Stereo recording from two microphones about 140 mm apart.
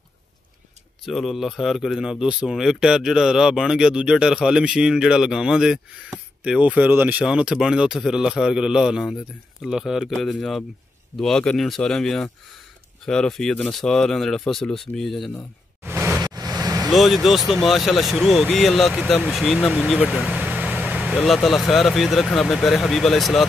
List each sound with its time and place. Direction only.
1.0 s speech: centre (ahead or behind)
15.8 s a sound: 15° right (ahead or behind)
16.3 s vehicle: 25° right (ahead or behind)
16.9 s speech: centre (ahead or behind)